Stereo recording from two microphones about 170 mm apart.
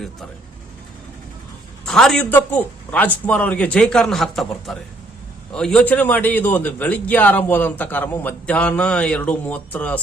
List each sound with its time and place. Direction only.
1.8 s a man's voice: 5° left (ahead or behind)